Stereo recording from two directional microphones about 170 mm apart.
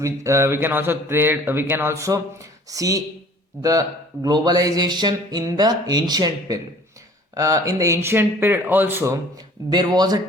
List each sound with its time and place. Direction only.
0.0 s speech: 20° right (ahead or behind)
9.6 s speech: 25° right (ahead or behind)